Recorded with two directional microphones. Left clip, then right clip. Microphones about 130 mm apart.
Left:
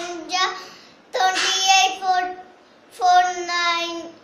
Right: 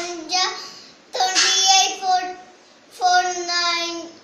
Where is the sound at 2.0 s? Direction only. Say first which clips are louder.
Right 1 dB; 10° left (ahead or behind).